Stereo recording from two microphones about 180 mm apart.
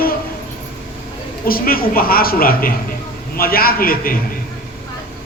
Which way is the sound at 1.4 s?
55° left (ahead or behind).